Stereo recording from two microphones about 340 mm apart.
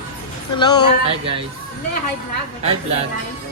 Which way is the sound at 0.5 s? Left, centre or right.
Centre.